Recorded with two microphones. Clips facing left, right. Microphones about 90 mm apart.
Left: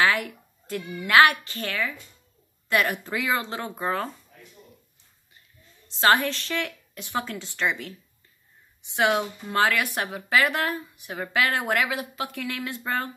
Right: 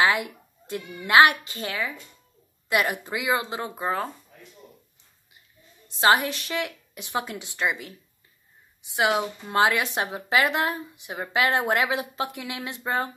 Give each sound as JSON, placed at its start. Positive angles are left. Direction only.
{"t": 0.0, "sound": "a sound", "side_deg": -20}
{"t": 1.0, "sound": "a woman's voice", "side_deg": -20}
{"t": 5.9, "sound": "a woman's voice", "side_deg": -15}
{"t": 8.9, "sound": "a woman's voice", "side_deg": -10}
{"t": 9.5, "sound": "speech", "side_deg": -20}